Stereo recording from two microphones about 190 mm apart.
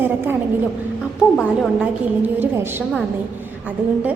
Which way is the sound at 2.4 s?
10° right (ahead or behind).